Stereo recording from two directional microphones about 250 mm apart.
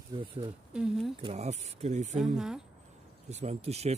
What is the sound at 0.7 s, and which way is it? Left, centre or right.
Speech, centre.